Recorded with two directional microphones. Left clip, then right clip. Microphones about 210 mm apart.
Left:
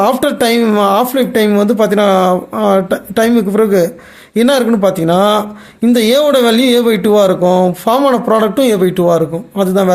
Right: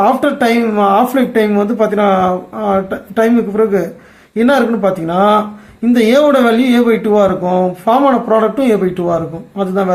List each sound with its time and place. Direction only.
0.0 s speech: 45° left (ahead or behind)